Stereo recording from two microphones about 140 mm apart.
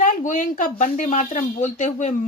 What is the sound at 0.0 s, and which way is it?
Speech, 65° left (ahead or behind).